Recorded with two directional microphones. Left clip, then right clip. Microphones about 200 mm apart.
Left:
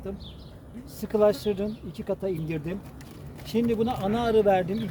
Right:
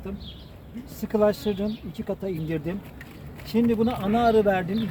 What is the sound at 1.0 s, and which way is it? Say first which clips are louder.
Speech: even; 25° left (ahead or behind).